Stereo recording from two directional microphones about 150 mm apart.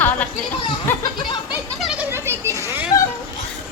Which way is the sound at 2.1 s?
20° right (ahead or behind).